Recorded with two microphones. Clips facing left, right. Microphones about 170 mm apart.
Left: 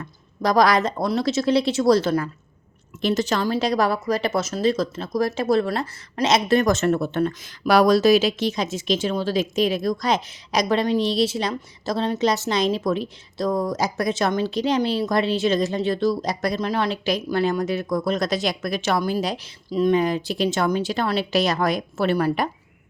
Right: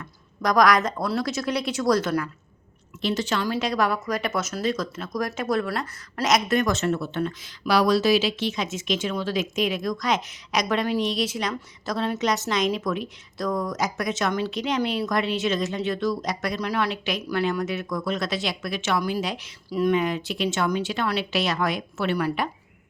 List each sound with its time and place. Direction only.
0.0 s a woman's voice: 30° left (ahead or behind)
3.0 s a woman's voice: 45° left (ahead or behind)
6.7 s speech: 50° left (ahead or behind)